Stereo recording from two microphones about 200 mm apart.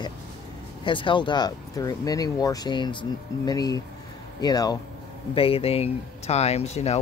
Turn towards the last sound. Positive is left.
turn(degrees=30)  # may be behind; listen again after turning